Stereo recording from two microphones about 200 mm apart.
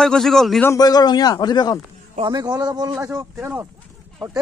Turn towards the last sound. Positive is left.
turn(degrees=-10)  # may be behind; listen again after turning